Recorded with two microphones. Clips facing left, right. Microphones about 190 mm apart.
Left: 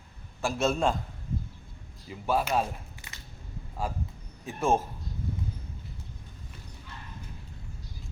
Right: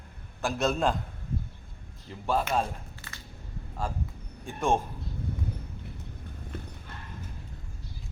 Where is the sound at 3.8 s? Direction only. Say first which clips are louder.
Even; 10° left (ahead or behind).